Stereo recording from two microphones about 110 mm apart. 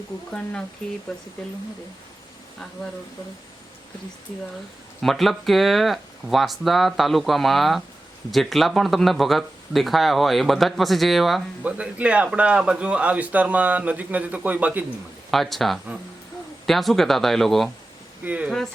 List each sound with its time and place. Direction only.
0.3 s speech: 10° left (ahead or behind)
5.0 s speech: centre (ahead or behind)
11.6 s a man's voice: 10° right (ahead or behind)
15.3 s speech: centre (ahead or behind)
18.3 s a man's voice: 10° right (ahead or behind)